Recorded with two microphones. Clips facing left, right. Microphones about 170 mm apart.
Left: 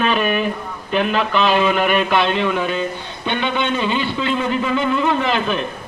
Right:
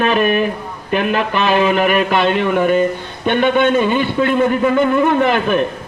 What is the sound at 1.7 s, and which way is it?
A man's voice, 50° right (ahead or behind).